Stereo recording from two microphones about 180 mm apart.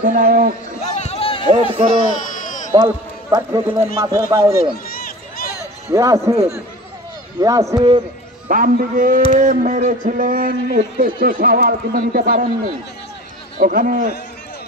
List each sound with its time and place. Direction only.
0.0 s speech: 50° right (ahead or behind)
0.9 s a sound: 35° left (ahead or behind)
1.5 s speech: 35° right (ahead or behind)
2.3 s bleat: 45° left (ahead or behind)
2.7 s a man's voice: 20° right (ahead or behind)
4.8 s run: 55° left (ahead or behind)
5.9 s speech: 15° right (ahead or behind)
7.3 s a man's voice: 20° right (ahead or behind)
8.5 s speech: 50° right (ahead or behind)
13.6 s speech: 50° right (ahead or behind)